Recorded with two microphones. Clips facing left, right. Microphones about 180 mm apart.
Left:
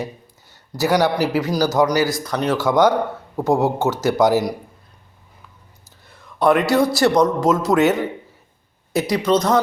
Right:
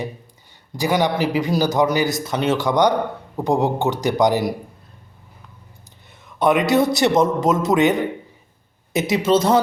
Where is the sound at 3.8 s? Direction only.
15° right (ahead or behind).